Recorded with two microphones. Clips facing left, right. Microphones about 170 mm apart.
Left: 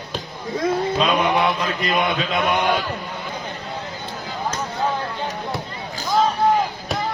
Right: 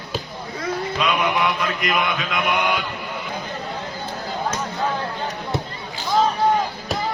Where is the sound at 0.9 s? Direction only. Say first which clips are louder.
Right 1 dB; 30° left (ahead or behind).